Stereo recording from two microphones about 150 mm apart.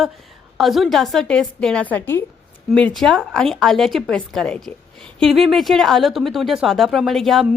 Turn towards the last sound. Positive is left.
turn(degrees=0)  # may be behind; listen again after turning